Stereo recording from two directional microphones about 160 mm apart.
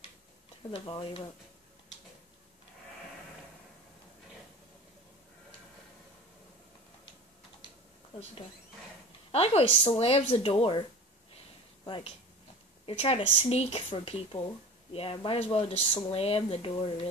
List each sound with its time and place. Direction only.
0.7 s speech: 30° left (ahead or behind)
9.3 s speech: 40° left (ahead or behind)